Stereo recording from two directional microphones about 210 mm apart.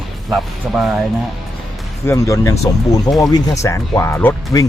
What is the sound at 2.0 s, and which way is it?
Speech, 15° left (ahead or behind).